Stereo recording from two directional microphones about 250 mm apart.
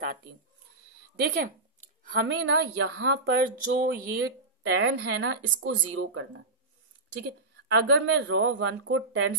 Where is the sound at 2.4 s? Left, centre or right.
Right.